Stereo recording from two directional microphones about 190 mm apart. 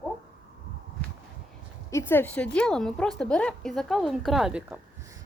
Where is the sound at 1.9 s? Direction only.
15° left (ahead or behind); by 4.8 s 5° right (ahead or behind).